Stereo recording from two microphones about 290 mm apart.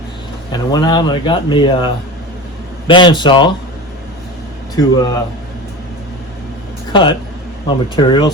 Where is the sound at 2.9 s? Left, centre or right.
Centre.